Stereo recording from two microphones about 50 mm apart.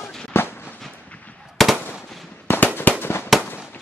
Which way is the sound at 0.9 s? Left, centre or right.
Left.